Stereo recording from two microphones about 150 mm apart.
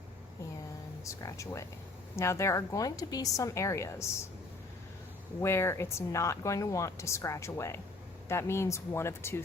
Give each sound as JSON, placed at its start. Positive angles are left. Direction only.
{"t": 1.0, "sound": "speech", "side_deg": 20}
{"t": 5.4, "sound": "speech", "side_deg": 15}